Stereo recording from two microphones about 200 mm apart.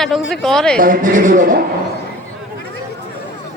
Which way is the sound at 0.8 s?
40° right (ahead or behind).